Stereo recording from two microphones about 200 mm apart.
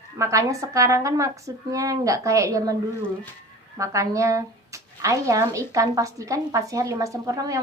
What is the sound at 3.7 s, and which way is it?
Speech, 15° right (ahead or behind).